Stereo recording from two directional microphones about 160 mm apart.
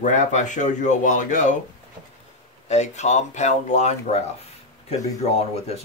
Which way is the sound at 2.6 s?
45° left (ahead or behind).